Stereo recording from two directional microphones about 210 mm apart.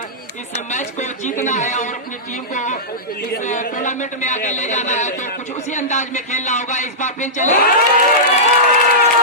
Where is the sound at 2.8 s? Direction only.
45° left (ahead or behind).